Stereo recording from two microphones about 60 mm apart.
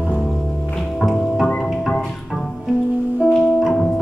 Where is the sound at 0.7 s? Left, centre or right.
Centre.